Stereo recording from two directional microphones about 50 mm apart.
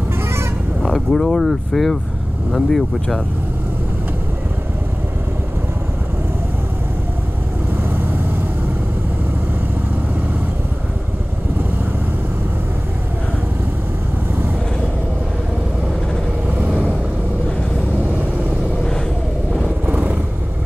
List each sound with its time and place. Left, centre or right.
0.8 s speech: centre
7.7 s vehicle: right
16.4 s vehicle: right
19.9 s vehicle: right